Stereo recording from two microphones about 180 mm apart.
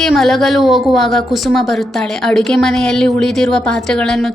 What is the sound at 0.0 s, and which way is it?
A woman's voice, centre (ahead or behind).